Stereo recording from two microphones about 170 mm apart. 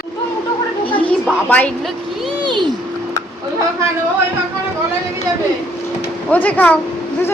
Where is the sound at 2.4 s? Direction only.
25° right (ahead or behind).